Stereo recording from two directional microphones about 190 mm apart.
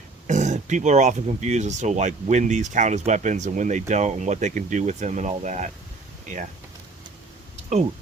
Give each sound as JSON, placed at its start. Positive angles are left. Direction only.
{"t": 0.3, "sound": "speech", "side_deg": -40}